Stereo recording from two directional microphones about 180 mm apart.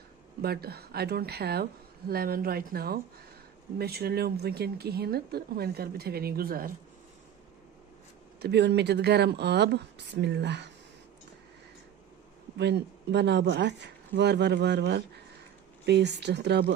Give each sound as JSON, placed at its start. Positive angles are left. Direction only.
{"t": 0.4, "sound": "speech", "side_deg": -60}
{"t": 8.4, "sound": "speech", "side_deg": -70}
{"t": 12.5, "sound": "speech", "side_deg": -70}